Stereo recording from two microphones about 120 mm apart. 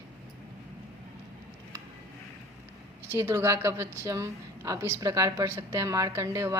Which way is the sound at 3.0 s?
20° right (ahead or behind).